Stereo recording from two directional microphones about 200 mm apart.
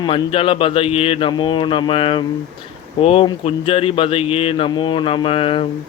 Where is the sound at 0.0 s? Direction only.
25° left (ahead or behind).